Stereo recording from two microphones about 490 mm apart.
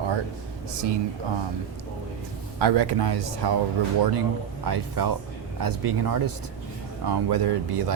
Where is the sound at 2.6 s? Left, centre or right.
Right.